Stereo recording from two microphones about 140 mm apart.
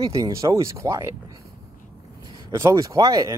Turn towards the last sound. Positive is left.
turn(degrees=-25)  # may be behind; listen again after turning